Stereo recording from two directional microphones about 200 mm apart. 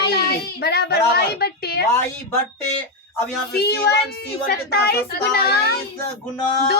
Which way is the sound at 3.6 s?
55° left (ahead or behind).